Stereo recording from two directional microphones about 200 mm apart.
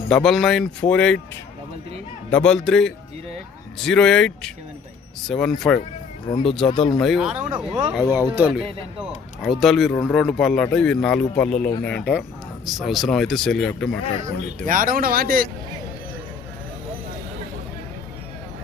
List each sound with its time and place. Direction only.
0.1 s speech: centre (ahead or behind)
2.3 s speech: 5° left (ahead or behind)
6.7 s speech: 30° left (ahead or behind)
6.9 s speech: centre (ahead or behind)
7.7 s speech: 25° right (ahead or behind)
8.0 s speech: 20° left (ahead or behind)
8.4 s speech: 10° right (ahead or behind)
14.6 s speech: 45° right (ahead or behind)